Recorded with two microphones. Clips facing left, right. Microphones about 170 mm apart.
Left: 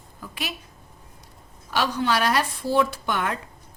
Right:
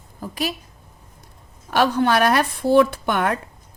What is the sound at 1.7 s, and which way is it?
A woman's voice, 55° right (ahead or behind).